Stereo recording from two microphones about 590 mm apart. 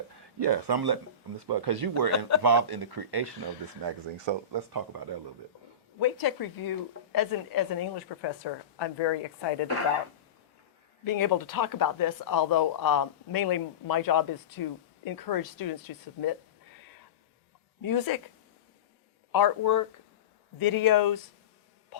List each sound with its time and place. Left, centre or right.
0.3 s speech: right
2.0 s speech: left
2.4 s speech: right
6.0 s speech: left
11.0 s speech: left
17.8 s speech: left
19.3 s speech: left